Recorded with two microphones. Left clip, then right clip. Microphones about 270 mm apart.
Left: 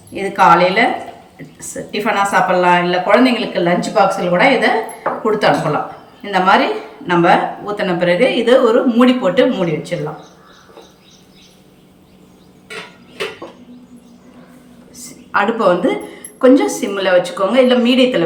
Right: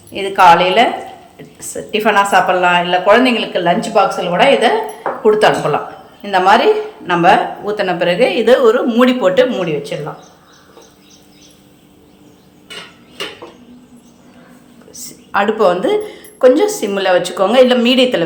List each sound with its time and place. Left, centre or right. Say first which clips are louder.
0.1 s a woman's voice: right 2 dB; centre
6.2 s a woman's voice: right 3 dB; centre
14.9 s a woman's voice: right 1 dB; right